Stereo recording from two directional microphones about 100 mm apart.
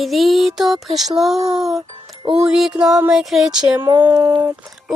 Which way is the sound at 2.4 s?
5° right (ahead or behind).